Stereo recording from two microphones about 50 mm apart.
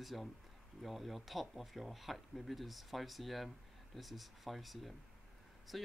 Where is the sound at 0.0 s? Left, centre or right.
Centre.